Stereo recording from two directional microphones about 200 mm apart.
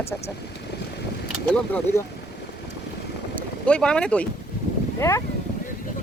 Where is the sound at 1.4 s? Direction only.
5° left (ahead or behind).